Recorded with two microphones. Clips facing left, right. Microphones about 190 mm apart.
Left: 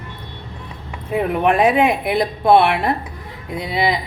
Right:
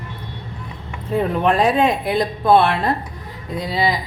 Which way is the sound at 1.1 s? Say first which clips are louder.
Left 1 dB; 15° left (ahead or behind).